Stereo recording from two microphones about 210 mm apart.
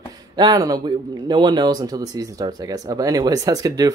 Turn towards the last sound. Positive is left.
turn(degrees=-15)  # may be behind; listen again after turning